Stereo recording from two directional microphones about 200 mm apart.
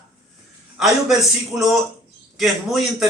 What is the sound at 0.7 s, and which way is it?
A man's voice, centre (ahead or behind).